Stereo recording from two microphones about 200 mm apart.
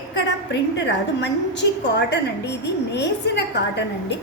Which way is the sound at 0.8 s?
60° left (ahead or behind).